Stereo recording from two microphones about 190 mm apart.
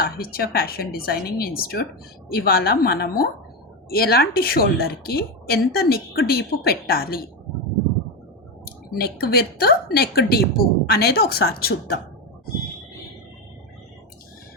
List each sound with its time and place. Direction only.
0.0 s a woman's voice: 55° left (ahead or behind)
9.0 s a woman's voice: 55° left (ahead or behind)